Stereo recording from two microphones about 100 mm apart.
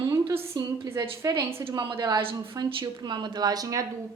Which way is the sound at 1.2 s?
35° right (ahead or behind).